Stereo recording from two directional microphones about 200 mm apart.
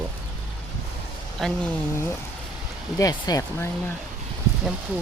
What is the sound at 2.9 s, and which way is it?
Speech, 15° left (ahead or behind).